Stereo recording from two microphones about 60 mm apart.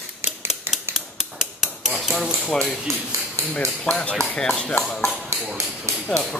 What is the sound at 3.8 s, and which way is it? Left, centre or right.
Speech, centre.